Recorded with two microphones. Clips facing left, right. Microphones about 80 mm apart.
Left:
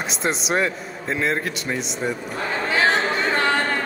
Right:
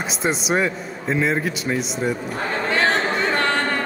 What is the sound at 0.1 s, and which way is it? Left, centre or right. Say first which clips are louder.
A man's voice: right 2 dB; centre.